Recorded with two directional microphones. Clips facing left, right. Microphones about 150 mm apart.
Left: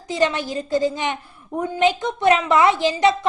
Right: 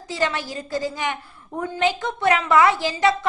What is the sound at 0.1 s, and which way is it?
A woman's voice, 20° left (ahead or behind).